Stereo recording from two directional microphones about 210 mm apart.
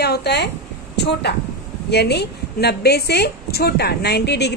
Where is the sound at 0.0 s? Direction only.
50° left (ahead or behind).